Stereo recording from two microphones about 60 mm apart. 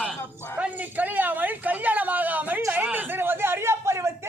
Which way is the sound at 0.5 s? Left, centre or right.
Right.